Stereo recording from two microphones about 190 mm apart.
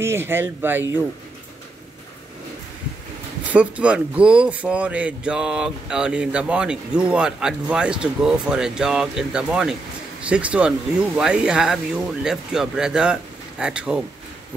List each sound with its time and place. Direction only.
0.0 s speech: 10° right (ahead or behind)
3.5 s speech: 5° right (ahead or behind)